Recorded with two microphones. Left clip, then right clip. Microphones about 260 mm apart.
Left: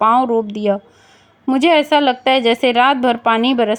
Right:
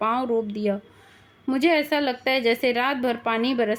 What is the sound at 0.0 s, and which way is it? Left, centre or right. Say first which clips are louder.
A woman's voice: left 10 dB; left.